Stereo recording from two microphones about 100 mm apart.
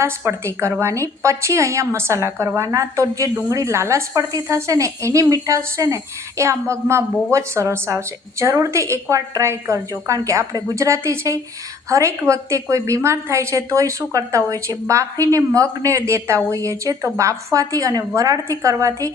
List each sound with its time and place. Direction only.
0.0 s a woman's voice: 25° right (ahead or behind)